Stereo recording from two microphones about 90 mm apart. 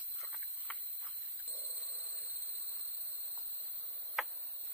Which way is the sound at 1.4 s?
20° right (ahead or behind).